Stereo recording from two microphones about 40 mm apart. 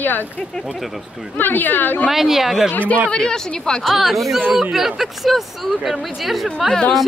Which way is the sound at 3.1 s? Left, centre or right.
Centre.